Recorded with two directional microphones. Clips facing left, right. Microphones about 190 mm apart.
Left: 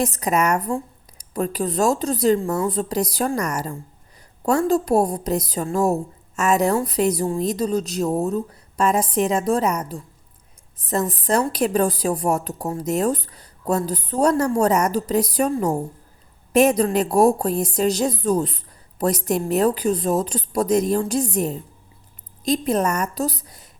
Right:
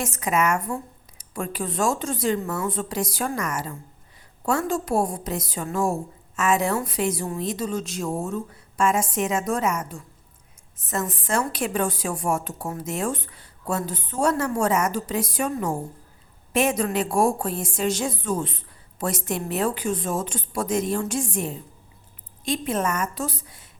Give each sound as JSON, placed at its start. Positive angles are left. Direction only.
{"t": 0.0, "sound": "a woman's voice", "side_deg": 35}